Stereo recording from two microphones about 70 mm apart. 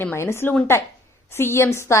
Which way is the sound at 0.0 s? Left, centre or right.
Left.